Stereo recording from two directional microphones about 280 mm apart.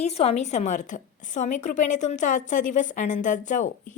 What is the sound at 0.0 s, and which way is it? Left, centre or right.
A woman's voice, left.